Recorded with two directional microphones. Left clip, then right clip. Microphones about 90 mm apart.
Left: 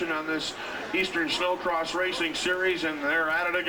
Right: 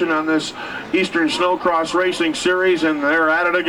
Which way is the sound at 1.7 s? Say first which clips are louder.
Right 10 dB; 50° right (ahead or behind).